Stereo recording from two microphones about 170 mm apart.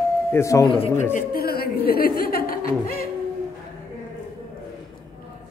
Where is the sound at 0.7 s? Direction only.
35° left (ahead or behind).